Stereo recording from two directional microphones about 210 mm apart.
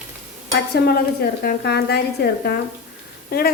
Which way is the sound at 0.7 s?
50° left (ahead or behind).